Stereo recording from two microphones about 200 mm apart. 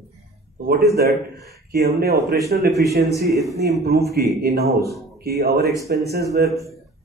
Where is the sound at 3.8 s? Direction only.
50° right (ahead or behind).